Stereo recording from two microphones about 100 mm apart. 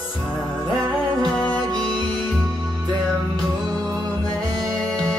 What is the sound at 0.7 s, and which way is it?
Music, 40° right (ahead or behind).